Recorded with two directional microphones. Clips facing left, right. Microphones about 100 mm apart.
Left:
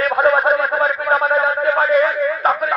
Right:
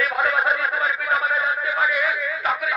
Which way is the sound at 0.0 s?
40° left (ahead or behind).